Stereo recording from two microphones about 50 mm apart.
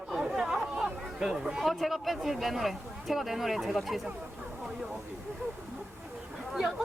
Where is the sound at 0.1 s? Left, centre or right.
Centre.